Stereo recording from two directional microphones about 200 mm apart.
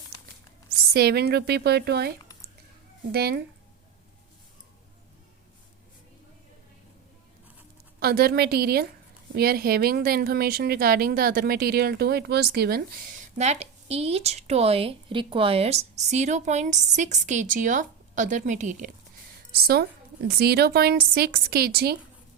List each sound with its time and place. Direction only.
0.9 s a woman's voice: 55° right (ahead or behind)
7.9 s a woman's voice: 50° right (ahead or behind)
19.6 s a woman's voice: 50° right (ahead or behind)